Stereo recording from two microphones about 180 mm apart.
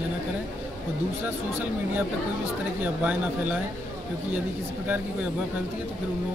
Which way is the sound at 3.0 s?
10° right (ahead or behind).